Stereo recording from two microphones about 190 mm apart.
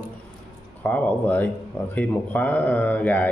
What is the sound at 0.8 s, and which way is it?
Speech, 10° left (ahead or behind).